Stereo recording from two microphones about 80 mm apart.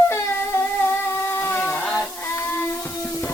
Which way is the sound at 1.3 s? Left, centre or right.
Left.